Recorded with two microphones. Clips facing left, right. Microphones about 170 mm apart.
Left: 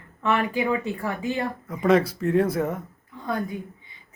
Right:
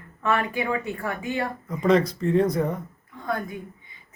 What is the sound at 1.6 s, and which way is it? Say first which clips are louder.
A woman's voice: even; centre (ahead or behind).